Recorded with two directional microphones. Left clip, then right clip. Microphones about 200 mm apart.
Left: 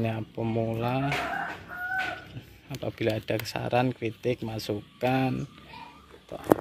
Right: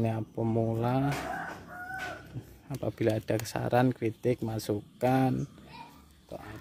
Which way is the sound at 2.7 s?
15° right (ahead or behind).